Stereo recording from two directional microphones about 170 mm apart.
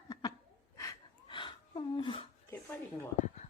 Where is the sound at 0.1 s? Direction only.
25° left (ahead or behind).